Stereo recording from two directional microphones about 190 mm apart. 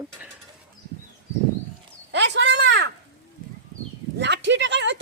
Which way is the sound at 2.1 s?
70° right (ahead or behind).